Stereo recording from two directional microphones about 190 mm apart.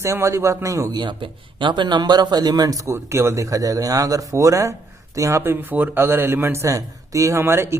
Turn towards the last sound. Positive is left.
turn(degrees=-15)  # may be behind; listen again after turning